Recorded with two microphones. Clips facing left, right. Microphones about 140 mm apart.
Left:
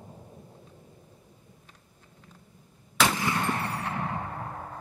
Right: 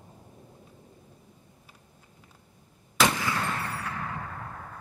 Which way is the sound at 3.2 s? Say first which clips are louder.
Left 2 dB; 25° left (ahead or behind).